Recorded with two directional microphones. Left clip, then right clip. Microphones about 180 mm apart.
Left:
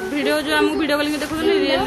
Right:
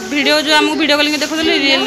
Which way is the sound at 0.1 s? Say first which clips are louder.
Right 8 dB; 5° right (ahead or behind).